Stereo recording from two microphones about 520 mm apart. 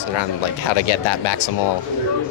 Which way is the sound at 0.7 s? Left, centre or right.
Left.